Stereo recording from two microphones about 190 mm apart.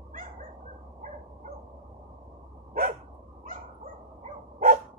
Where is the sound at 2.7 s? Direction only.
50° right (ahead or behind).